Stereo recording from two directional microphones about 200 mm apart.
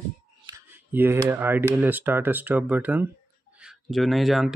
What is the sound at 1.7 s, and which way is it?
Speech, 10° right (ahead or behind).